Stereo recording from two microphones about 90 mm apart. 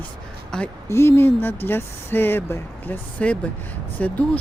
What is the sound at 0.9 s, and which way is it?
Speech, 30° left (ahead or behind).